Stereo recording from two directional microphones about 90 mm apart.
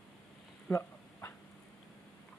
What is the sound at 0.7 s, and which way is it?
Dog, 30° left (ahead or behind).